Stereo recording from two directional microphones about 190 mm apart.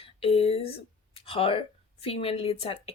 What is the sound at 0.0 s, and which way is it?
Speech, 30° left (ahead or behind).